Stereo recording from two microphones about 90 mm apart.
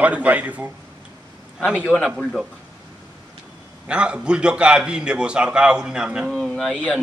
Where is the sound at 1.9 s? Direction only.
Centre (ahead or behind).